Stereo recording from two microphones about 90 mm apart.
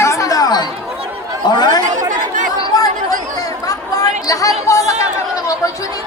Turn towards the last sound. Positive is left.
turn(degrees=40)  # may be behind; listen again after turning